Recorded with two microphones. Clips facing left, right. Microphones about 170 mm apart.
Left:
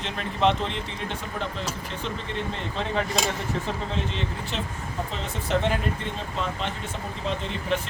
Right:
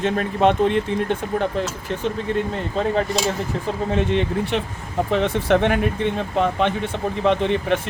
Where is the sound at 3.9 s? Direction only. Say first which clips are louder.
Right 10 dB; 60° right (ahead or behind).